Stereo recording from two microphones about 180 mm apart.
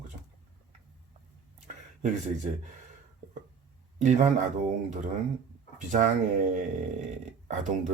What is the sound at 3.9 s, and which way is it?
Speech, 40° right (ahead or behind).